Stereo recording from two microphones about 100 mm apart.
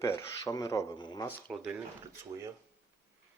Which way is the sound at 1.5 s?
Centre (ahead or behind).